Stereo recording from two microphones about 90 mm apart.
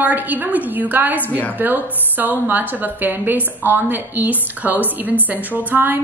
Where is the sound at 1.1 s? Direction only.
20° left (ahead or behind).